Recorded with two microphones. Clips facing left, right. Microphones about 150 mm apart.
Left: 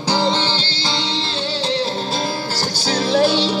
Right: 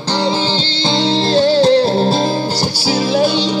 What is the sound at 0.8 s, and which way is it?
Music, 30° right (ahead or behind).